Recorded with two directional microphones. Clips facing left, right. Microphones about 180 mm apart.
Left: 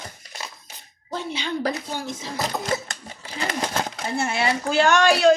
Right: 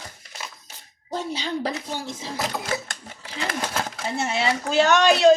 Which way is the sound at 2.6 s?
Centre (ahead or behind).